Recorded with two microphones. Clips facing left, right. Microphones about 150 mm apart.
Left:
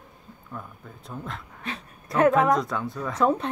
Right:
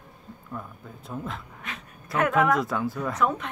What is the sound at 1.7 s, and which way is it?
Speech, 30° left (ahead or behind).